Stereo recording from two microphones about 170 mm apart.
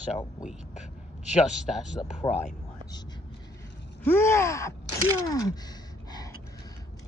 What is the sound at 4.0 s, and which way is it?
Gasp, 15° left (ahead or behind).